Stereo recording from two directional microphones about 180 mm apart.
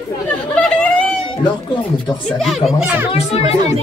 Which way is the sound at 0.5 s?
5° left (ahead or behind).